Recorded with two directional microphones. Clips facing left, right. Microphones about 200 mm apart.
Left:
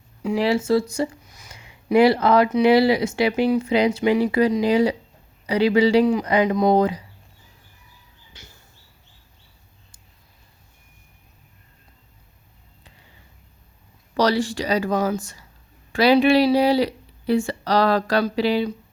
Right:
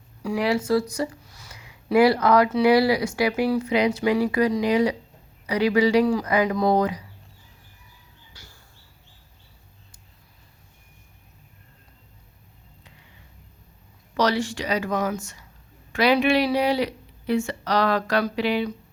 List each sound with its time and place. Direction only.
0.2 s speech: 25° left (ahead or behind)
8.3 s a sound: 20° left (ahead or behind)
14.2 s speech: 35° left (ahead or behind)